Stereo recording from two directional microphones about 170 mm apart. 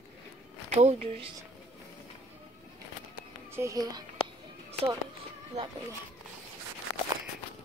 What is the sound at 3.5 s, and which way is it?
Speech, 20° right (ahead or behind).